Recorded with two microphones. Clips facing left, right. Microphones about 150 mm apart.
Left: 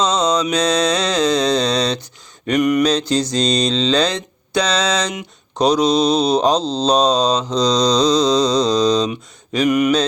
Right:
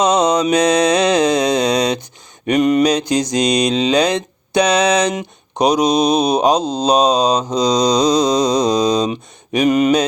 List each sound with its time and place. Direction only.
0.2 s mantra: 55° right (ahead or behind)
0.4 s mantra: 20° right (ahead or behind)
2.5 s a sound: 25° right (ahead or behind)
2.8 s mantra: 15° right (ahead or behind)
9.0 s speech: 20° right (ahead or behind)